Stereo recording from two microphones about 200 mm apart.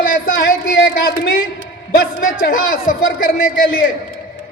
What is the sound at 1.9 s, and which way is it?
A man's voice, 45° left (ahead or behind).